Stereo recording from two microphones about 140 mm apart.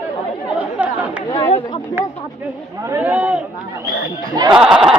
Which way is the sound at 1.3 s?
40° left (ahead or behind).